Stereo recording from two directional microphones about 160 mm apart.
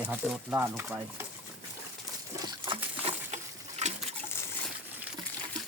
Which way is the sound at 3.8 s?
45° right (ahead or behind).